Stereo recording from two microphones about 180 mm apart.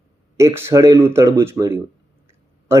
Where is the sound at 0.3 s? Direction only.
15° right (ahead or behind).